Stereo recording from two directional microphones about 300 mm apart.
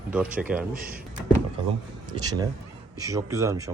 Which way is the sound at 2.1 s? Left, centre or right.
Centre.